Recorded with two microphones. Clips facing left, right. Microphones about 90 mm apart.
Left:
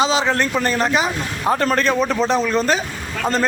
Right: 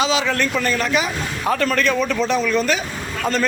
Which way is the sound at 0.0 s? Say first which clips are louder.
Left 2 dB; 30° left (ahead or behind).